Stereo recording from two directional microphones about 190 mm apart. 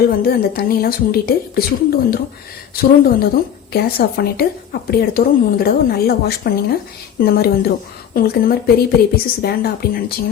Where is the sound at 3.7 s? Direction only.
55° left (ahead or behind).